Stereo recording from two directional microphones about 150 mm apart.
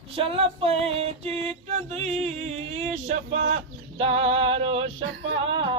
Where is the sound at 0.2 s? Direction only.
40° right (ahead or behind).